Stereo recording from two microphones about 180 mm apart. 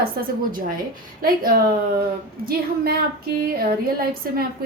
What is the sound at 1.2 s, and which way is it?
A woman's voice, 55° right (ahead or behind).